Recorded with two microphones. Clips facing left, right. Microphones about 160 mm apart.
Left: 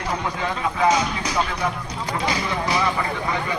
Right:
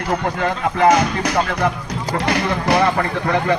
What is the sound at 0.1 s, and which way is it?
A man's voice, 60° right (ahead or behind).